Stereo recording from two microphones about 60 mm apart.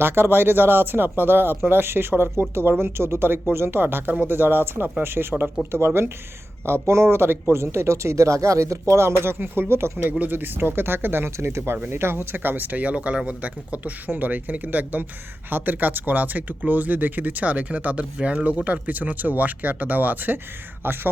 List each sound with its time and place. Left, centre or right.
0.0 s speech: right
10.1 s speech: right
11.3 s speech: right